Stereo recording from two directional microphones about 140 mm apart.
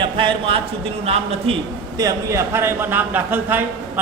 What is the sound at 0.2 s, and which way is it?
A man's voice, 40° right (ahead or behind).